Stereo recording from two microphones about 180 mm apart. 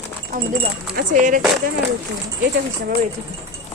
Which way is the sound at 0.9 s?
50° right (ahead or behind).